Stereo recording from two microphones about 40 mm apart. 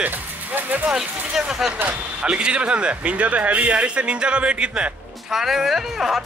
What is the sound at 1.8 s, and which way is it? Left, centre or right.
Speech, right.